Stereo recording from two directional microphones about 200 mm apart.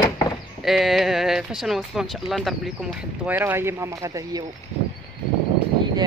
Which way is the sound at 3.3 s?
10° right (ahead or behind).